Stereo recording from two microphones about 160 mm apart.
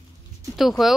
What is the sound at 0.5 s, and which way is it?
Speech, centre (ahead or behind).